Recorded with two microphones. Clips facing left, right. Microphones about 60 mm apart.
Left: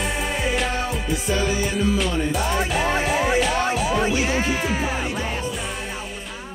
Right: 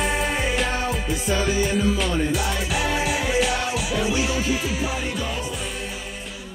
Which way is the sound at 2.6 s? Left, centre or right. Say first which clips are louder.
Left 3 dB; left.